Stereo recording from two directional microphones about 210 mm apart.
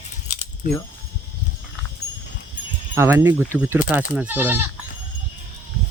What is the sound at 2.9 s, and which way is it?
Speech, 15° right (ahead or behind).